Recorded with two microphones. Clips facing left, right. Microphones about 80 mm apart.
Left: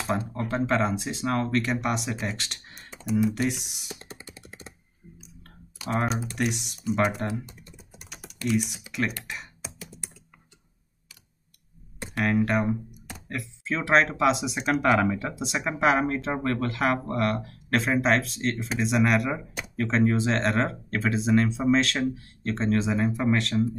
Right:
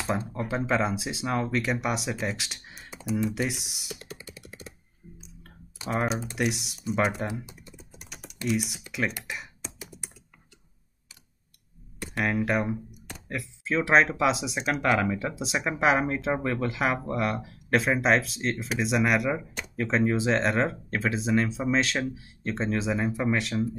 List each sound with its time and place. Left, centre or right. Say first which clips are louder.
0.5 s speech: left 2 dB; centre
4.0 s computer keyboard: right 1 dB; left
5.9 s speech: left 1 dB; centre
7.7 s typing: even; centre
8.5 s speech: left 2 dB; centre
9.8 s computer keyboard: even; centre
12.1 s speech: left 2 dB; centre